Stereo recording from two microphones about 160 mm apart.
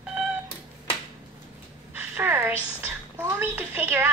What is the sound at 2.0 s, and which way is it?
A woman's voice, 15° right (ahead or behind).